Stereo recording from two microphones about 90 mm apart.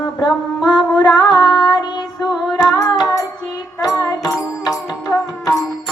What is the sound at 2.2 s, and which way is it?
Female singing, 5° right (ahead or behind).